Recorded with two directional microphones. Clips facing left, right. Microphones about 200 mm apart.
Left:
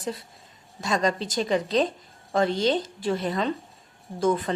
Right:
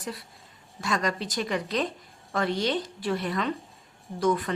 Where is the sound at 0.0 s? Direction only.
25° left (ahead or behind).